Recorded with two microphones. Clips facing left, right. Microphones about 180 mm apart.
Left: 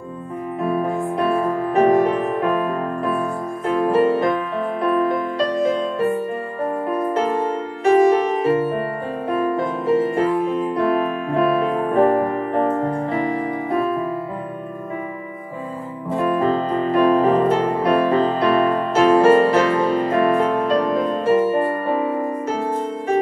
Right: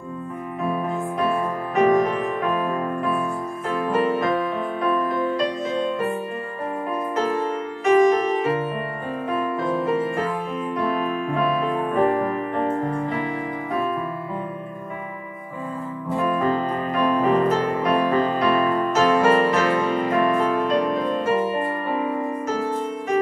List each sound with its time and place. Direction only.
1.8 s music: 30° left (ahead or behind)
3.8 s music: 30° left (ahead or behind)
7.8 s music: 35° left (ahead or behind)
9.8 s music: 30° left (ahead or behind)
11.9 s music: 35° left (ahead or behind)
16.2 s music: 35° left (ahead or behind)